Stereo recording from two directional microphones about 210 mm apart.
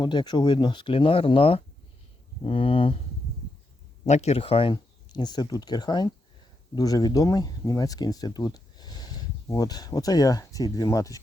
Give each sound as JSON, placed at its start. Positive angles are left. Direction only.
{"t": 0.0, "sound": "speech", "side_deg": 20}
{"t": 4.0, "sound": "speech", "side_deg": 30}